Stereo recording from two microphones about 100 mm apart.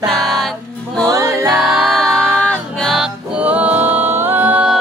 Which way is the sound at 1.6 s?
5° right (ahead or behind).